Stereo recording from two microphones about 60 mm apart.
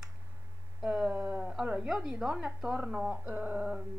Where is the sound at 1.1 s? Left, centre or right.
Right.